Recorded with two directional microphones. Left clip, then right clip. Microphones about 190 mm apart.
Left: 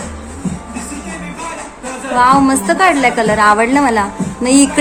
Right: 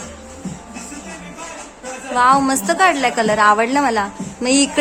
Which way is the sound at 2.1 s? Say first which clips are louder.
Left 4 dB; 20° right (ahead or behind).